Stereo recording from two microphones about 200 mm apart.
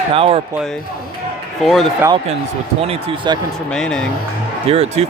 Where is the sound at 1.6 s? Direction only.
Centre (ahead or behind).